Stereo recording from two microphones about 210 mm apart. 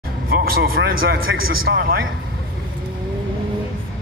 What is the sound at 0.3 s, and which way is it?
Speech, 45° right (ahead or behind).